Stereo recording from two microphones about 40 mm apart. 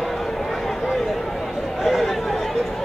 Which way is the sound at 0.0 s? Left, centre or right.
Centre.